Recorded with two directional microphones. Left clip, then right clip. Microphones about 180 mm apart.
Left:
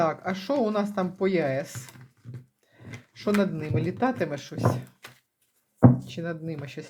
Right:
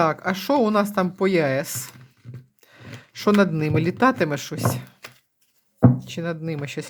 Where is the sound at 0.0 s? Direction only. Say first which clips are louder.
Right 5 dB; 35° right (ahead or behind).